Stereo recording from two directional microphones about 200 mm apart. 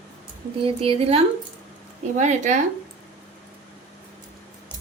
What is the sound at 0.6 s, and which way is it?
A woman's voice, 30° right (ahead or behind).